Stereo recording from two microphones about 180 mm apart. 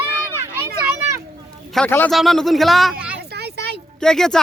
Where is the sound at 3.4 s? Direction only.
65° right (ahead or behind).